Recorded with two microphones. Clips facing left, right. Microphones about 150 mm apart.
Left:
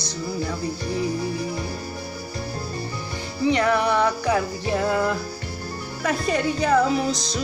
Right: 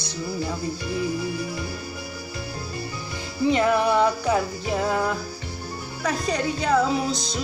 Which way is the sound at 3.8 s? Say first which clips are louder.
Right 1 dB; 10° right (ahead or behind).